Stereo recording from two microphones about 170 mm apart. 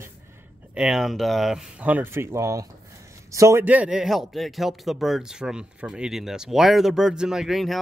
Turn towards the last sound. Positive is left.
turn(degrees=0)  # may be behind; listen again after turning